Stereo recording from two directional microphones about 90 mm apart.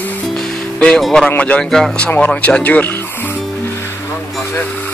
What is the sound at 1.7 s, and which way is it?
Speech, 5° left (ahead or behind).